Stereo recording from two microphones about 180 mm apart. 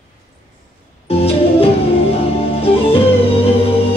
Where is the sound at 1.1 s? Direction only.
35° left (ahead or behind).